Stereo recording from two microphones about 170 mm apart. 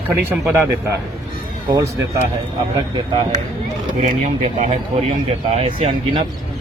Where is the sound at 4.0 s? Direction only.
45° right (ahead or behind).